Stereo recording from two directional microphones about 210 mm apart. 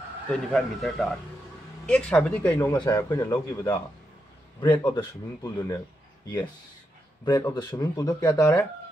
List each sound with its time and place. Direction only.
0.3 s speech: 5° left (ahead or behind)
2.7 s speech: 20° left (ahead or behind)
7.7 s speech: 15° left (ahead or behind)